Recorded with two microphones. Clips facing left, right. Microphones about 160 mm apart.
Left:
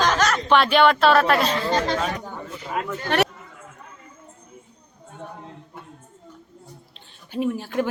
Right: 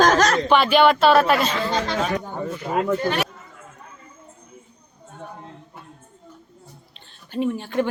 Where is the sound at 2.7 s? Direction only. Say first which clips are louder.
Right 5 dB; 55° right (ahead or behind).